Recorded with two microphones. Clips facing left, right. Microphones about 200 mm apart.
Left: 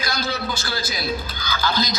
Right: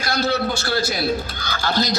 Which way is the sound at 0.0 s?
65° right (ahead or behind).